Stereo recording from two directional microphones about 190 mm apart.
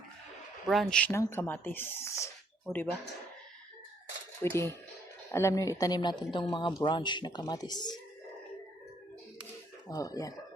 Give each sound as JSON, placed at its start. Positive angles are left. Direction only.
{"t": 0.7, "sound": "speech", "side_deg": 0}
{"t": 2.7, "sound": "speech", "side_deg": 0}
{"t": 4.4, "sound": "speech", "side_deg": 15}
{"t": 9.9, "sound": "speech", "side_deg": 20}